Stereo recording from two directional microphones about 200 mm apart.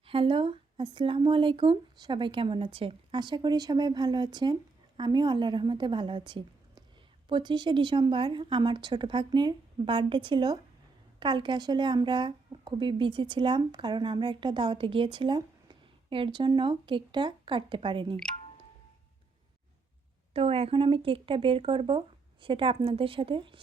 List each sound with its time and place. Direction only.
0.0 s a woman's voice: 25° right (ahead or behind)
20.3 s speech: 30° right (ahead or behind)